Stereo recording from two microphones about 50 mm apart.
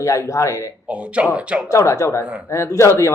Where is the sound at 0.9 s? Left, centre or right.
Right.